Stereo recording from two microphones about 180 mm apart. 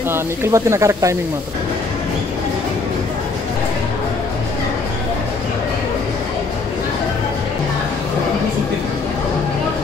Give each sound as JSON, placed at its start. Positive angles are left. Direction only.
{"t": 0.1, "sound": "speech", "side_deg": -15}